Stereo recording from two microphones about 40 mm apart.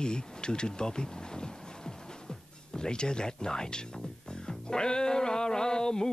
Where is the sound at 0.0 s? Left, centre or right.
Left.